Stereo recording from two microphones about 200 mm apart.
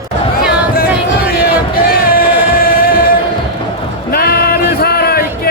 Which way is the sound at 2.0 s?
45° left (ahead or behind).